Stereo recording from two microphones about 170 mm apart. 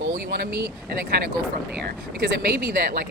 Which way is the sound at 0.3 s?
65° right (ahead or behind).